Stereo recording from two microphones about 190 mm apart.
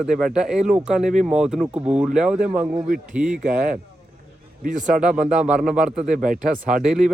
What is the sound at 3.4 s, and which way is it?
Speech, 40° right (ahead or behind).